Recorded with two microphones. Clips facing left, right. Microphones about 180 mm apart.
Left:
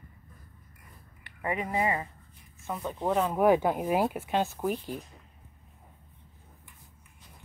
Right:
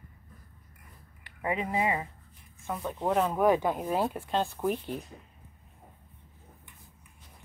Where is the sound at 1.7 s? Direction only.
15° right (ahead or behind).